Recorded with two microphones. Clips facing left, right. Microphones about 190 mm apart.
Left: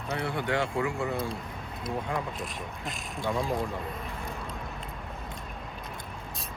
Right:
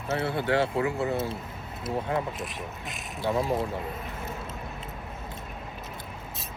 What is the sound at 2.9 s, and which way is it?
Speech, 5° right (ahead or behind).